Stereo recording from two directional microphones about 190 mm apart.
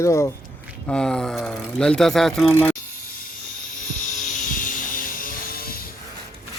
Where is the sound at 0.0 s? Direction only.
15° left (ahead or behind).